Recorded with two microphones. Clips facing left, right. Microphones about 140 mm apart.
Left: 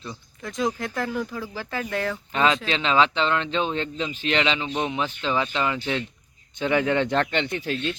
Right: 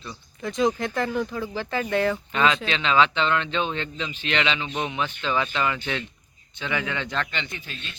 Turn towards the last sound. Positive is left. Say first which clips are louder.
# left 12 dB
turn(degrees=80)